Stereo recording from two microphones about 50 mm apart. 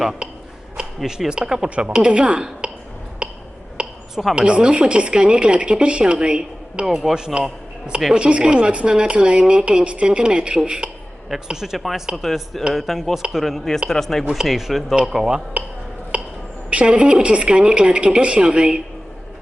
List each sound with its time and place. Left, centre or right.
0.8 s speech: centre
3.2 s a sound: right
4.1 s a woman's voice: centre
4.4 s speech: centre
6.8 s a man's voice: centre
16.1 s a sound: right
16.6 s speech: right